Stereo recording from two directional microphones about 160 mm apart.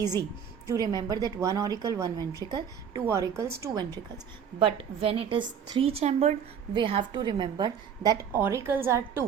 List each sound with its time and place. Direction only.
0.0 s a woman's voice: 25° right (ahead or behind)
4.6 s a woman's voice: 35° right (ahead or behind); by 9.2 s 15° right (ahead or behind)